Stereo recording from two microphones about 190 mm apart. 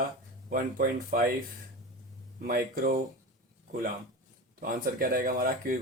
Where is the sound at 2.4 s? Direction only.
50° right (ahead or behind).